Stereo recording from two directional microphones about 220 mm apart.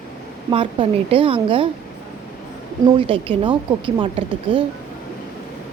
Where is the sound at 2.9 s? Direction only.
25° right (ahead or behind).